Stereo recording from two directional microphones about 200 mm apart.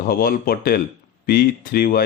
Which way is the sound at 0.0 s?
45° left (ahead or behind).